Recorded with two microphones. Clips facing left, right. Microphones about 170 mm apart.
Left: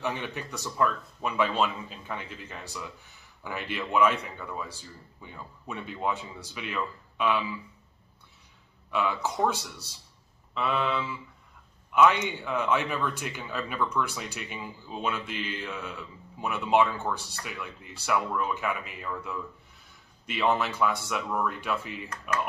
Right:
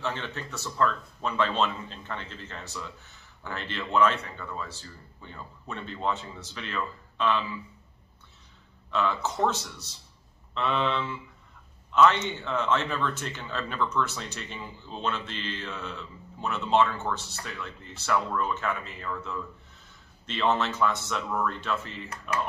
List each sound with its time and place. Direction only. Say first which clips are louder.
0.0 s a man's voice: left 1 dB; 15° left (ahead or behind)
8.9 s a man's voice: right 1 dB; 10° left (ahead or behind)